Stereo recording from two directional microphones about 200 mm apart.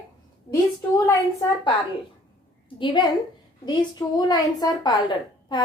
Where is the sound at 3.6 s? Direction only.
20° left (ahead or behind).